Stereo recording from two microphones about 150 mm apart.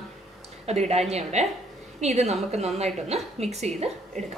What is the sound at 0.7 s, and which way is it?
A woman's voice, 45° right (ahead or behind).